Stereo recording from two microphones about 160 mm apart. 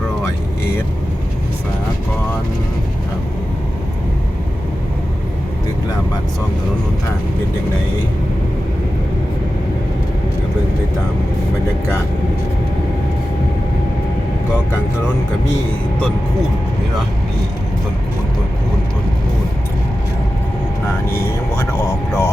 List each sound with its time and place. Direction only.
21.1 s speech: 15° left (ahead or behind)